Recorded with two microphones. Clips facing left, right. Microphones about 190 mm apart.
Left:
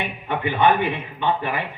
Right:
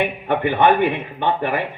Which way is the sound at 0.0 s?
55° right (ahead or behind).